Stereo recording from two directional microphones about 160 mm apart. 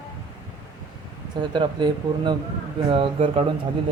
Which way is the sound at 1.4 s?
30° right (ahead or behind).